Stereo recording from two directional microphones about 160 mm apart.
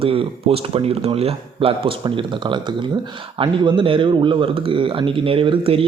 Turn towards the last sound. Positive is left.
turn(degrees=-35)  # may be behind; listen again after turning